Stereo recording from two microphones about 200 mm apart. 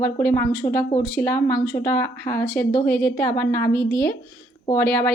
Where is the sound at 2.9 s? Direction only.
45° left (ahead or behind).